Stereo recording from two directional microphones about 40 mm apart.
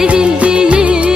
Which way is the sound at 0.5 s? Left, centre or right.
Right.